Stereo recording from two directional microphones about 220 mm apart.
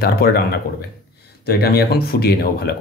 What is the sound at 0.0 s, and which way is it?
Speech, 45° left (ahead or behind).